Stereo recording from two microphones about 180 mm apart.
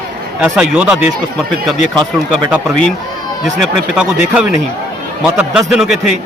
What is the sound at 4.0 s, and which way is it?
A man's voice, 5° right (ahead or behind).